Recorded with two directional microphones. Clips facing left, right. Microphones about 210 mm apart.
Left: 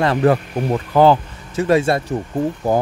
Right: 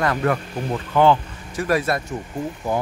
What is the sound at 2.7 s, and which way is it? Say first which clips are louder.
Speech: left 5 dB; 40° left (ahead or behind).